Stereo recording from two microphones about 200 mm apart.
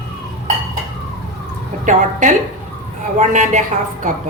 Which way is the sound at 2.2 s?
40° right (ahead or behind).